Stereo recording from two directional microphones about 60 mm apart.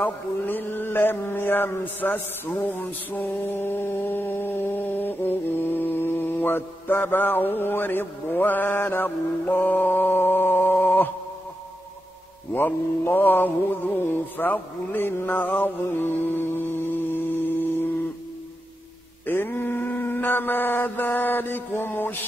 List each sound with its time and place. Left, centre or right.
0.0 s mantra: left
12.5 s mantra: left
17.1 s a sound: left
19.2 s mantra: left